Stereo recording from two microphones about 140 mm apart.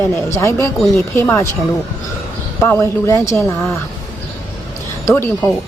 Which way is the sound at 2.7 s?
20° left (ahead or behind).